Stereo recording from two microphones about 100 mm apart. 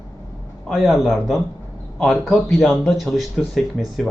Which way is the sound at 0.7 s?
Centre (ahead or behind).